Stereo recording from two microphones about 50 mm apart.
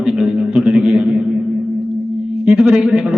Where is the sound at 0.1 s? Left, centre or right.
Centre.